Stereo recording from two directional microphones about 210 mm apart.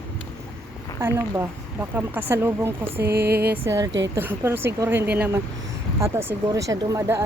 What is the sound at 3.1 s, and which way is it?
Speech, 50° right (ahead or behind).